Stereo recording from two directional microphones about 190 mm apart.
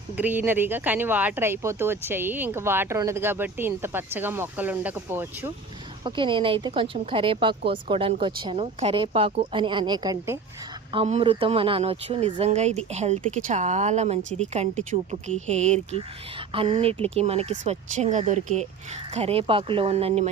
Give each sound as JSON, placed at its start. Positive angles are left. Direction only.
{"t": 0.2, "sound": "speech", "side_deg": -10}
{"t": 6.1, "sound": "speech", "side_deg": -25}